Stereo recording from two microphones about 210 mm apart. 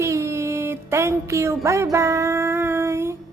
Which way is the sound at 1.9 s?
15° right (ahead or behind).